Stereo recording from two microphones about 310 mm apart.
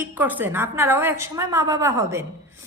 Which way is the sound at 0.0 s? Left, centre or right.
Centre.